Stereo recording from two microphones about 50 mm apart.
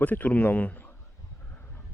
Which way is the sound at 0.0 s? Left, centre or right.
Left.